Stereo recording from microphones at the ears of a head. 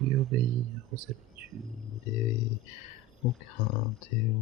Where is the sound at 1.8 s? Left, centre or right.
Left.